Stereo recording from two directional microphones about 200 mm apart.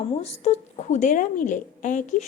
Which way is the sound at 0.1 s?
30° left (ahead or behind).